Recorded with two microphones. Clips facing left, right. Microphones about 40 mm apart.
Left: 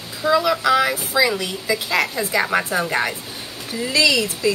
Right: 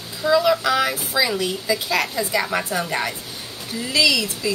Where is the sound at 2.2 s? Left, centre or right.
Left.